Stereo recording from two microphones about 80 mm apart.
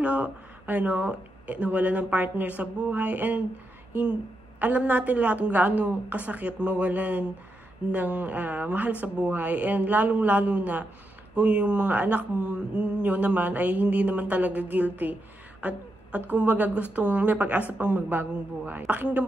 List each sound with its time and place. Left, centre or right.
0.0 s speech: centre